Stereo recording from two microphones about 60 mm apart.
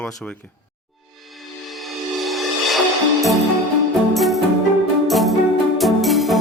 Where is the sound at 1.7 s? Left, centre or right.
Centre.